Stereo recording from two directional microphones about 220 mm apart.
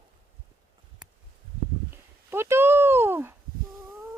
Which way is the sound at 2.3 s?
10° right (ahead or behind).